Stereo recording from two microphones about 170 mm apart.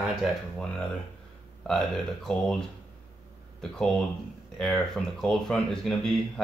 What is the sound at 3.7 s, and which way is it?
Speech, centre (ahead or behind).